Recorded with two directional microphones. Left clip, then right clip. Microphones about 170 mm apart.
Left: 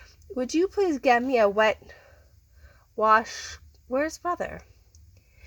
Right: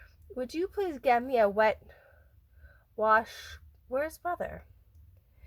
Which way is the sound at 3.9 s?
30° left (ahead or behind).